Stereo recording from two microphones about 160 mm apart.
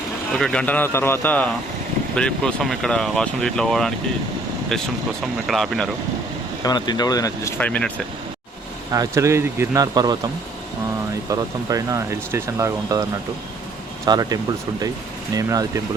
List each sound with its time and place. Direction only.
0.3 s a man's voice: 5° left (ahead or behind)
6.6 s speech: 25° left (ahead or behind)
7.6 s a man's voice: 10° left (ahead or behind)
8.9 s speech: 20° right (ahead or behind)
11.3 s speech: 20° right (ahead or behind)
15.4 s speech: 20° right (ahead or behind)